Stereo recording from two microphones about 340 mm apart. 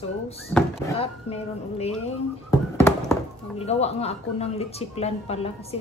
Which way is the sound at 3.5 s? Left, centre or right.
Centre.